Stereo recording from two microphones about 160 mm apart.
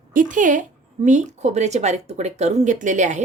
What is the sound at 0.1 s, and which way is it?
A woman's voice, 55° right (ahead or behind).